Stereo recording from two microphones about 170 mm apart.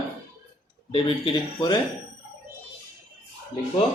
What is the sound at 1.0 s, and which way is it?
Speech, 30° left (ahead or behind).